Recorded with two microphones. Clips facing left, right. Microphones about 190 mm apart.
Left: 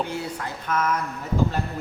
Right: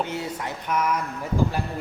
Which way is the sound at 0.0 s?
20° right (ahead or behind).